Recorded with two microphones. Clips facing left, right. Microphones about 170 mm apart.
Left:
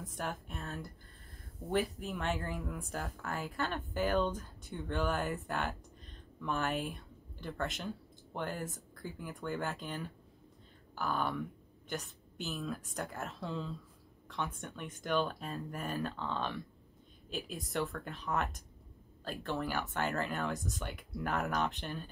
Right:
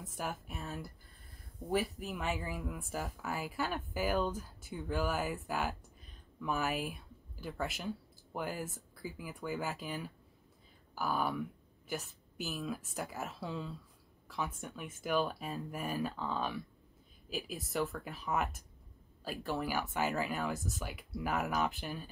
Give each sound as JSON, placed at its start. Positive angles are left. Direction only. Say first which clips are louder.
{"t": 0.0, "sound": "speech", "louder": "even", "side_deg": -5}